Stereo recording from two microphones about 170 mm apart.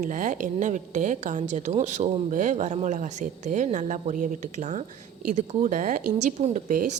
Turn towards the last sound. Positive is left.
turn(degrees=-50)  # may be behind; listen again after turning